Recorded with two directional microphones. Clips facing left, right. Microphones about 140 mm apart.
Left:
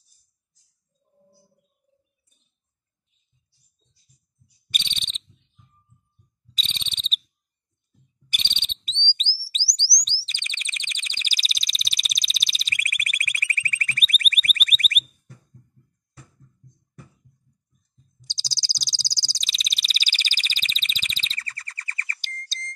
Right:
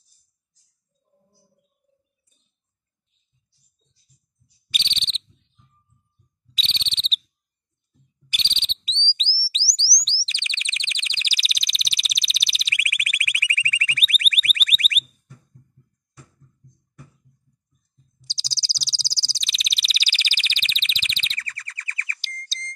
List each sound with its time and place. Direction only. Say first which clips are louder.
4.6 s cricket: right 1 dB; 45° left (ahead or behind)
6.5 s whistle: right 2 dB; 45° left (ahead or behind)
8.3 s insect: right 1 dB; 50° left (ahead or behind)
9.1 s a sound: right 2 dB; 50° left (ahead or behind)
10.0 s chirp tone: right 2 dB; 50° left (ahead or behind)
18.2 s a sound: right 1 dB; 45° left (ahead or behind)